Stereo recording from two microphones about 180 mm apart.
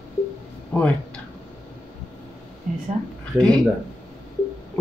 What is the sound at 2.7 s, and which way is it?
Speech, 45° right (ahead or behind).